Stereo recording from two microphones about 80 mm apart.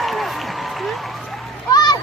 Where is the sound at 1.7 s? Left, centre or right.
Left.